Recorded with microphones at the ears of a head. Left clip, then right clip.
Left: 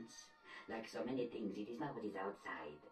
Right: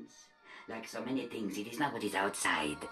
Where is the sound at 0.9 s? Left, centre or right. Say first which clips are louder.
Right 5 dB; right.